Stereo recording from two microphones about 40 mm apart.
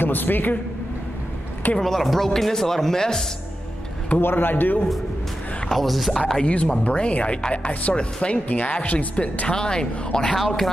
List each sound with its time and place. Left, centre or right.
0.0 s a man's voice: left
1.8 s speech: centre
4.2 s a man's voice: left
5.7 s speech: centre
6.4 s speech: left
9.6 s speech: centre
10.4 s speech: centre